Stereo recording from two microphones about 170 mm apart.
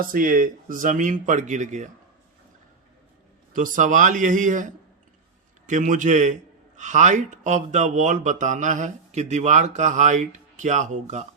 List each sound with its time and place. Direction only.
0.1 s speech: 55° right (ahead or behind)
3.5 s speech: 50° right (ahead or behind)